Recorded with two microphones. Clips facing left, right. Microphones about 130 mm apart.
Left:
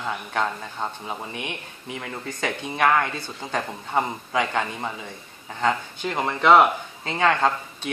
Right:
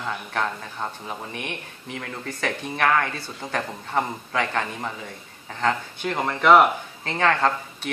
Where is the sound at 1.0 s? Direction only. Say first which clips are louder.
Left 1 dB; 5° left (ahead or behind).